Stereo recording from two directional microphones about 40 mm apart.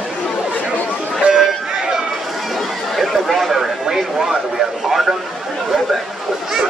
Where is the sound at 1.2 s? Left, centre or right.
Centre.